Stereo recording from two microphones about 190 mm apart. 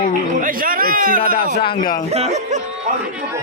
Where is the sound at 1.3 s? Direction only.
55° left (ahead or behind).